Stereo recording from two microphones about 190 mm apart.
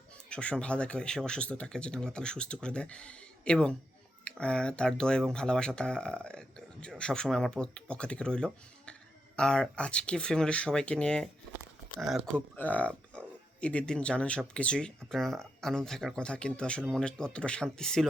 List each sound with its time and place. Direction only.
0.3 s speech: 5° left (ahead or behind)